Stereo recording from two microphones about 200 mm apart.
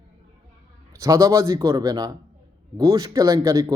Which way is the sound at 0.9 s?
15° right (ahead or behind).